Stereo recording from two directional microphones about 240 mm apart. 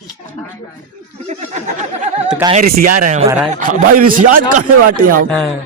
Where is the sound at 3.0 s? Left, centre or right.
Right.